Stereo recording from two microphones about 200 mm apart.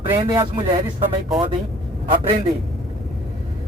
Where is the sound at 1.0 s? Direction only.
Centre (ahead or behind).